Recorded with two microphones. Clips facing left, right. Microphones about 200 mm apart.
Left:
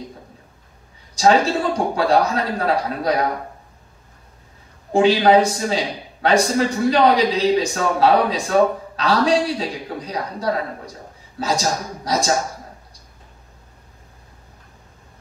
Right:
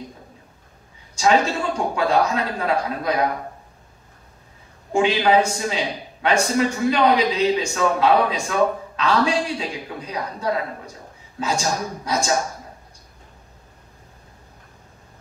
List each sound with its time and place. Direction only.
1.1 s a man's voice: 35° left (ahead or behind)
4.9 s a man's voice: 35° left (ahead or behind)